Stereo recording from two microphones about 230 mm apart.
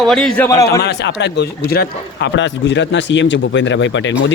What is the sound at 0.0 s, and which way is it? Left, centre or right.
Speech, centre.